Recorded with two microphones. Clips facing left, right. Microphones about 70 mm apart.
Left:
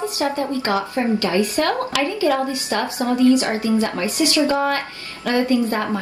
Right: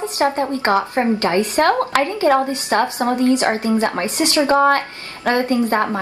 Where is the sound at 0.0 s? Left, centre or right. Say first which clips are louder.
Right 3 dB; right.